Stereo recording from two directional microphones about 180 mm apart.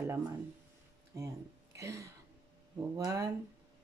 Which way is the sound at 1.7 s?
15° right (ahead or behind).